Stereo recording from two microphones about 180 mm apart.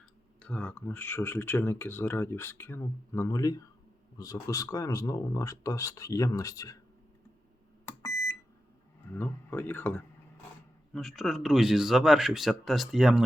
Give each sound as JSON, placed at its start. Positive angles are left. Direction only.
{"t": 0.3, "sound": "speech", "side_deg": 5}
{"t": 7.9, "sound": "beep", "side_deg": 15}
{"t": 9.1, "sound": "speech", "side_deg": 10}